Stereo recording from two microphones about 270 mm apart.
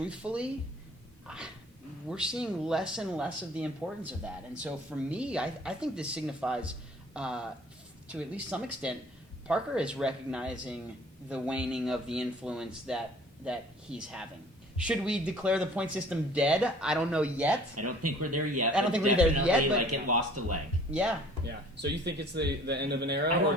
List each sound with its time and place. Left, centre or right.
0.0 s speech: centre
2.0 s speech: centre
17.7 s speech: right
18.7 s speech: centre
19.9 s speech: right
21.4 s speech: right